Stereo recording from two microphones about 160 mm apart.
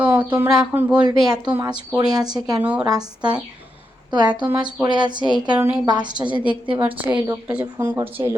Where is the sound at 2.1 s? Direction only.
25° right (ahead or behind).